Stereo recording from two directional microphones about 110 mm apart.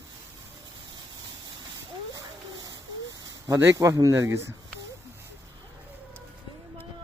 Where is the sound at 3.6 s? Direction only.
25° right (ahead or behind).